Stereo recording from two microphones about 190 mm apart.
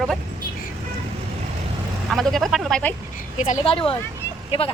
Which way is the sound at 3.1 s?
40° left (ahead or behind).